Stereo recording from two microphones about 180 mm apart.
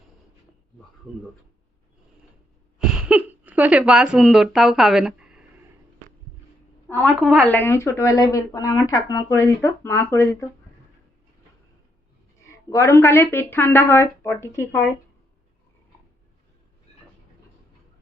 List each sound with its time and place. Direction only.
2.7 s a sound: 5° right (ahead or behind)
6.8 s a woman's voice: 5° left (ahead or behind)
12.5 s speech: 15° left (ahead or behind)